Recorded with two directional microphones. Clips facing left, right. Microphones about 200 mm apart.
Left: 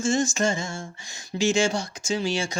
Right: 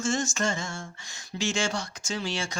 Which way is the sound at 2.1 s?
10° left (ahead or behind).